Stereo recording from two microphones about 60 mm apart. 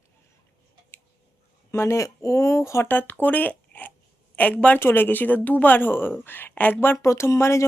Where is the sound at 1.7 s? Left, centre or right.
Left.